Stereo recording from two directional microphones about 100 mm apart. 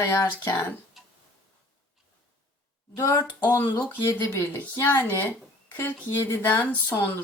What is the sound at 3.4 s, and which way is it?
A woman's voice, 20° left (ahead or behind).